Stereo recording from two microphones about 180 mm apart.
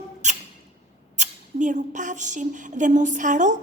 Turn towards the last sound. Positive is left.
turn(degrees=-45)  # may be behind; listen again after turning